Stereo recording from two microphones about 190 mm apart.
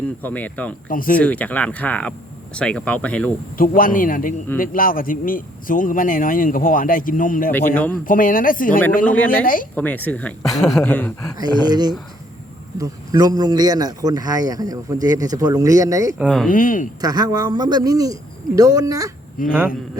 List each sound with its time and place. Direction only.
0.2 s speech: 10° left (ahead or behind)
0.9 s speech: 45° left (ahead or behind)
1.2 s speech: 5° left (ahead or behind)
3.6 s speech: 45° left (ahead or behind)
9.0 s speech: 10° left (ahead or behind)
9.4 s speech: 45° left (ahead or behind)
9.7 s speech: 10° left (ahead or behind)
11.3 s speech: 20° right (ahead or behind)
16.1 s speech: centre (ahead or behind)
16.5 s speech: 45° left (ahead or behind)
17.0 s speech: 20° right (ahead or behind)
19.4 s speech: 45° left (ahead or behind)